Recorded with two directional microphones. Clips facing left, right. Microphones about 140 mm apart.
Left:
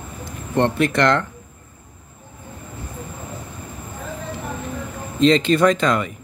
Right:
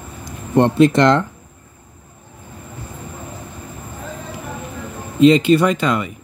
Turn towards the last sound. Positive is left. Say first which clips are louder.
# left 1 dB
turn(degrees=-5)  # may be behind; listen again after turning